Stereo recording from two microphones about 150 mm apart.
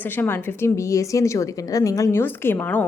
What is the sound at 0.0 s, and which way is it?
A woman's voice, 15° left (ahead or behind).